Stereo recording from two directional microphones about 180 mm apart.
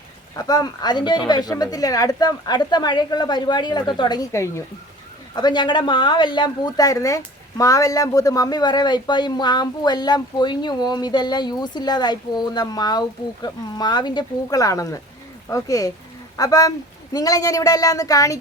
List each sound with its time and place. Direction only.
0.3 s speech: 20° left (ahead or behind)